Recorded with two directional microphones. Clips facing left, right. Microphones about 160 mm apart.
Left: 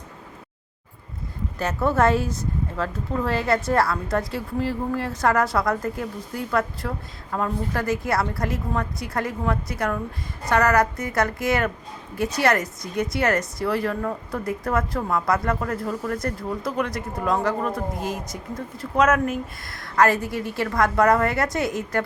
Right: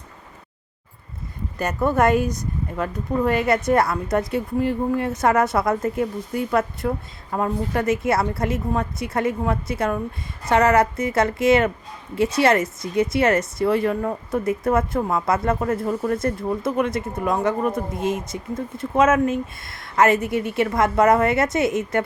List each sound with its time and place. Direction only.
1.5 s a woman's voice: 15° right (ahead or behind)